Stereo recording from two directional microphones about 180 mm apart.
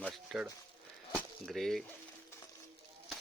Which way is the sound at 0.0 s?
Centre (ahead or behind).